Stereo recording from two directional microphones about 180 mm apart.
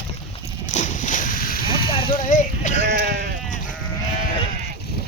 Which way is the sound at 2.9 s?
60° right (ahead or behind).